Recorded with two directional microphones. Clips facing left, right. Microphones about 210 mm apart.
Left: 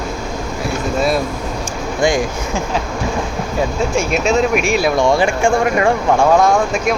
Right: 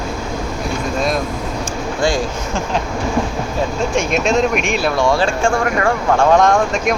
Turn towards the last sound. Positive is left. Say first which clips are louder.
# even
turn(degrees=5)  # may be behind; listen again after turning